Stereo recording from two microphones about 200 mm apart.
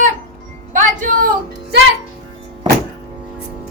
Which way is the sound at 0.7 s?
40° right (ahead or behind).